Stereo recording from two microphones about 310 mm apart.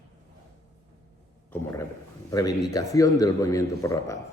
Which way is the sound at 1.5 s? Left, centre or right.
Centre.